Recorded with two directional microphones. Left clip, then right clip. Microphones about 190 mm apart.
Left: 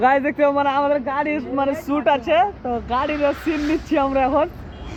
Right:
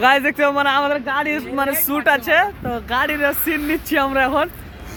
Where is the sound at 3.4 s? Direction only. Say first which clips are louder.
Right 1 dB; 50° right (ahead or behind).